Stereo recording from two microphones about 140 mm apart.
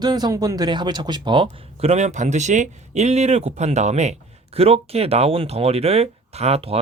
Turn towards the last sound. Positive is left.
turn(degrees=-45)  # may be behind; listen again after turning